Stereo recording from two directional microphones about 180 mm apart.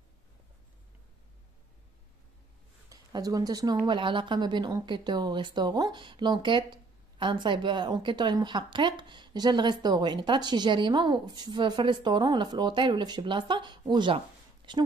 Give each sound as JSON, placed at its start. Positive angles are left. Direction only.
{"t": 2.9, "sound": "speech", "side_deg": -20}